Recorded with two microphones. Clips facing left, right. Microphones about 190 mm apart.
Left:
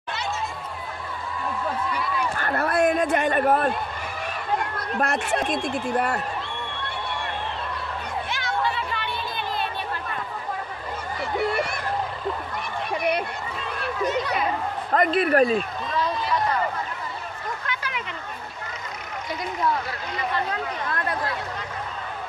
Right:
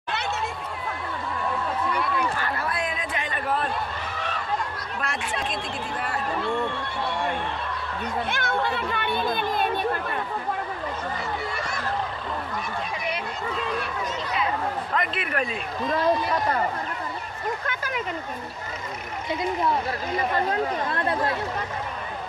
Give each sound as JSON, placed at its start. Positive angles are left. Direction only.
{"t": 2.3, "sound": "a sound", "side_deg": 50}
{"t": 4.9, "sound": "speech", "side_deg": 45}
{"t": 8.3, "sound": "speech", "side_deg": -55}
{"t": 12.9, "sound": "speech", "side_deg": 60}
{"t": 15.0, "sound": "a man's voice", "side_deg": 40}
{"t": 15.9, "sound": "speech", "side_deg": -50}
{"t": 17.6, "sound": "a sound", "side_deg": -45}
{"t": 20.2, "sound": "speech", "side_deg": -40}
{"t": 20.9, "sound": "speech", "side_deg": -25}